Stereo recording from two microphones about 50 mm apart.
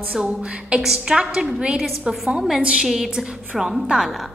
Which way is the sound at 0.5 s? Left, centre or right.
Right.